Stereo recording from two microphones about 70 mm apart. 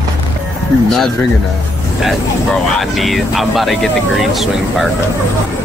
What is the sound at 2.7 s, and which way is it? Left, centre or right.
Speech, centre.